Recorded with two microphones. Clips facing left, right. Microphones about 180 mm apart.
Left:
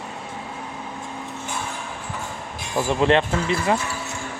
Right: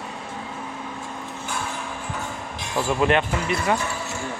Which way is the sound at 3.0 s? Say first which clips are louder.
Left 3 dB; 30° left (ahead or behind).